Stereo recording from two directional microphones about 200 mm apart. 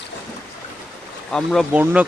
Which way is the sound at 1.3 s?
Centre (ahead or behind).